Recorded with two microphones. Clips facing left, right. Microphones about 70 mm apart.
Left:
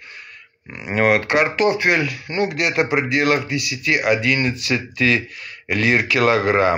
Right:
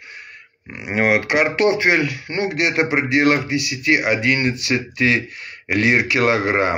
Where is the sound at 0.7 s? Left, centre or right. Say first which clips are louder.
Left 1 dB; right.